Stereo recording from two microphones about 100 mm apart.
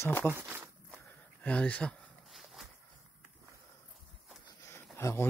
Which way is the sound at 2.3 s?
Centre (ahead or behind).